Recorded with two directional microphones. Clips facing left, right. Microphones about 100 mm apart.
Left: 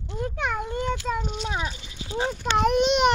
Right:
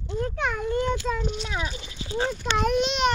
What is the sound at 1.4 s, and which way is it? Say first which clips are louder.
Speech: left 2 dB; 30° left (ahead or behind).